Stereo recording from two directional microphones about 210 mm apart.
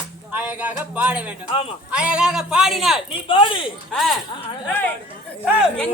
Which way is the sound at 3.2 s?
25° left (ahead or behind).